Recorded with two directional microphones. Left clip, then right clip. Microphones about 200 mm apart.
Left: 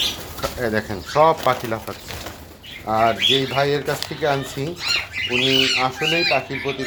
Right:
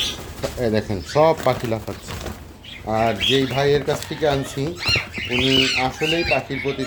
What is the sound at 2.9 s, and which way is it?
Speech, 10° right (ahead or behind).